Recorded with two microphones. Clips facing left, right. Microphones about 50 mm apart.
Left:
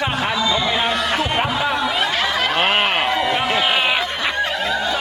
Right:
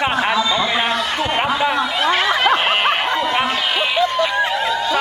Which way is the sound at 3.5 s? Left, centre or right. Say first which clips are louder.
Left 1 dB; left.